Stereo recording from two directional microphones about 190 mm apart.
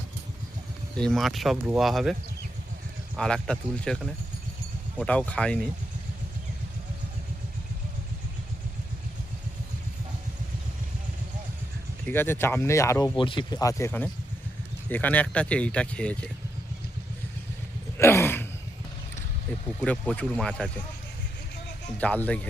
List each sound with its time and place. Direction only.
0.9 s speech: 5° left (ahead or behind)
3.2 s speech: 5° left (ahead or behind)
12.0 s speech: 10° left (ahead or behind)
13.1 s speech: 25° left (ahead or behind); by 16.3 s 5° left (ahead or behind)
17.9 s gasp: 15° left (ahead or behind)
19.8 s speech: 5° left (ahead or behind)
21.9 s speech: 10° left (ahead or behind)